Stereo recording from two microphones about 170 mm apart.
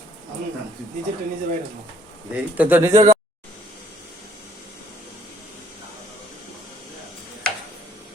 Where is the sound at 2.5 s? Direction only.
10° right (ahead or behind).